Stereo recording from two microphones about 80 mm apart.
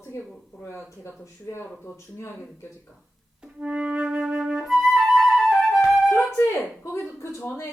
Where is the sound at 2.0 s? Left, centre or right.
Left.